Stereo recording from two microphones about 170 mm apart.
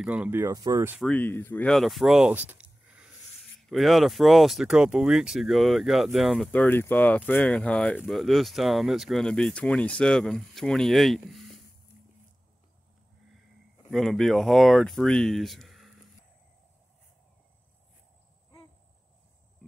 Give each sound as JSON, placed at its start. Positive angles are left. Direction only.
{"t": 0.0, "sound": "speech", "side_deg": -10}
{"t": 1.0, "sound": "speech", "side_deg": 10}
{"t": 13.8, "sound": "speech", "side_deg": 0}